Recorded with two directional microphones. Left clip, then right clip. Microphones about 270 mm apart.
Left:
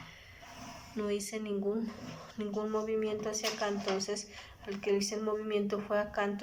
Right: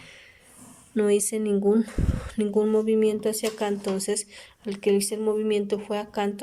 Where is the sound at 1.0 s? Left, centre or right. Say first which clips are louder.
Right 13 dB; right.